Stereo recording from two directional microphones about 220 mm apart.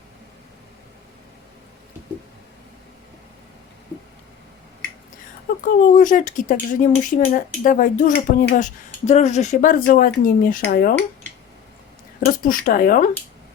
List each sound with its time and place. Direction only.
5.6 s speech: 35° left (ahead or behind)
12.2 s speech: 40° left (ahead or behind)